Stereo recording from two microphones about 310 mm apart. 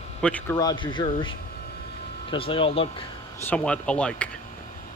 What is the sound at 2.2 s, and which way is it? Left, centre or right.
Speech, centre.